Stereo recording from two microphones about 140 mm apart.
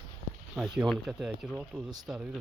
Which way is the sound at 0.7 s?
Centre (ahead or behind).